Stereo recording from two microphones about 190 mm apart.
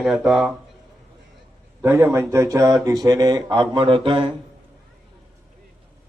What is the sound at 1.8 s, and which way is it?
A man's voice, 10° right (ahead or behind).